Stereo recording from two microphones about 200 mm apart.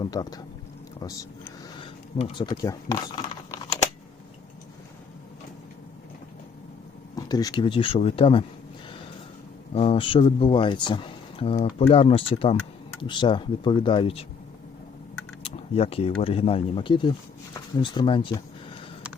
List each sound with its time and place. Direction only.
0.0 s speech: 20° left (ahead or behind)
0.9 s a sound: 15° left (ahead or behind)
2.1 s speech: 30° left (ahead or behind)
7.2 s speech: 20° left (ahead or behind)
9.7 s speech: 30° left (ahead or behind)
15.4 s speech: 30° left (ahead or behind)